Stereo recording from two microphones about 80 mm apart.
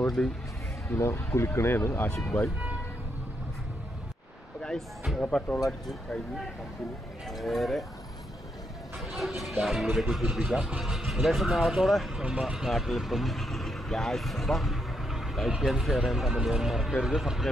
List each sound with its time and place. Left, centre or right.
0.0 s speech: centre
0.8 s speech: left
4.6 s a sound: centre
5.2 s speech: centre
7.2 s speech: centre
9.4 s speech: centre